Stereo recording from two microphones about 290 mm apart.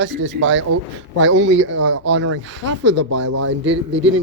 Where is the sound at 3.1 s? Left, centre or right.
Right.